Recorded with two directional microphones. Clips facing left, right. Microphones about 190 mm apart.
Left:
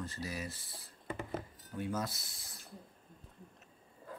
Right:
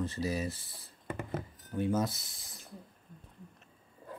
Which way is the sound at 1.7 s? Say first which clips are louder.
Right 7 dB; 25° right (ahead or behind).